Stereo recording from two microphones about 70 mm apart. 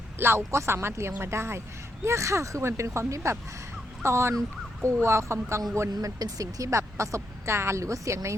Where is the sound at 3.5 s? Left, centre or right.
Right.